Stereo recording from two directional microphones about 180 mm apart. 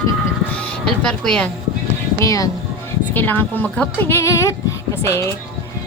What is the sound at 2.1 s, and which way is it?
Speech, 20° left (ahead or behind).